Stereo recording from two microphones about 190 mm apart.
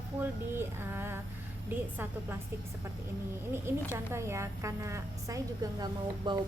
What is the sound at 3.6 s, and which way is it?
Speech, 15° right (ahead or behind).